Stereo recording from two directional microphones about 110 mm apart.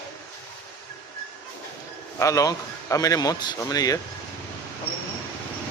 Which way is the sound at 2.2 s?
30° left (ahead or behind).